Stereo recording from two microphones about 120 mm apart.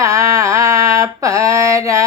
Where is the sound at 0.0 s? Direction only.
25° right (ahead or behind).